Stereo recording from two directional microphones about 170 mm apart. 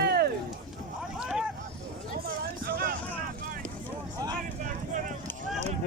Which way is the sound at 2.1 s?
60° right (ahead or behind).